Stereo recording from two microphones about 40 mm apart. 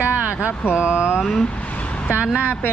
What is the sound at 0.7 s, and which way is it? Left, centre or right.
Speech, right.